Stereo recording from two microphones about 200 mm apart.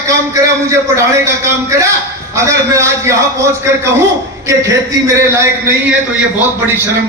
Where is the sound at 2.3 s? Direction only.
15° right (ahead or behind).